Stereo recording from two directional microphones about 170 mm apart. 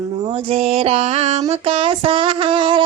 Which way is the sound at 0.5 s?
35° right (ahead or behind).